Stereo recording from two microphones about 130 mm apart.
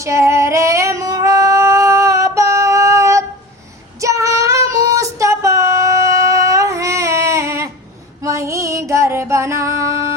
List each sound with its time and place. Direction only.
0.0 s female singing: 20° right (ahead or behind)
4.0 s child singing: 25° right (ahead or behind)
4.9 s a sound: 25° right (ahead or behind)
8.2 s music: 25° right (ahead or behind)